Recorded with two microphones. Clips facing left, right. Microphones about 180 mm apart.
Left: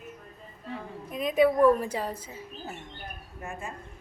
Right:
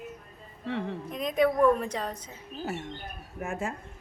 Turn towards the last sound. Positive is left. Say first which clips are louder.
# right 5 dB
turn(degrees=-90)